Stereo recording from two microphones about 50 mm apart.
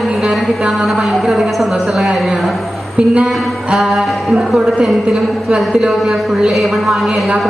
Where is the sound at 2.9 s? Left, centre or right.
Centre.